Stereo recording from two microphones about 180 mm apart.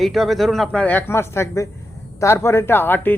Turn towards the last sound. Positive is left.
turn(degrees=10)  # may be behind; listen again after turning